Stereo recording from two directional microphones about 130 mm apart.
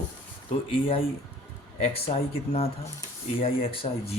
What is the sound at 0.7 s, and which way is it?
Speech, 45° left (ahead or behind).